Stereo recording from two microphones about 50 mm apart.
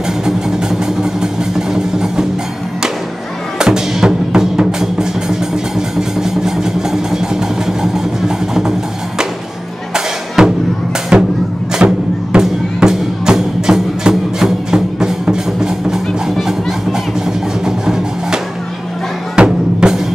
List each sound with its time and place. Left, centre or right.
0.2 s vehicle: centre
1.2 s music: centre
3.5 s music: centre
5.8 s vehicle: centre
9.9 s music: centre
17.6 s music: centre